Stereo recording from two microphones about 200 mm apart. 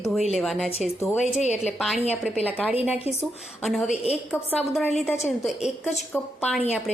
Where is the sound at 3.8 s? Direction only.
30° left (ahead or behind).